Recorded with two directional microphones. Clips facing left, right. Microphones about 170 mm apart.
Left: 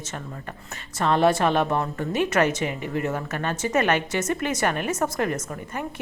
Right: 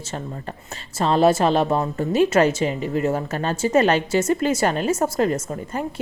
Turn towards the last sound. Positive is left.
turn(degrees=-30)  # may be behind; listen again after turning